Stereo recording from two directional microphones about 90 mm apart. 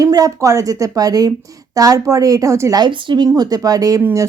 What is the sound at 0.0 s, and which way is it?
Speech, 40° right (ahead or behind).